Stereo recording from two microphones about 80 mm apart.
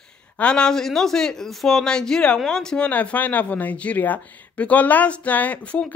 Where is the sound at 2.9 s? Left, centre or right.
Centre.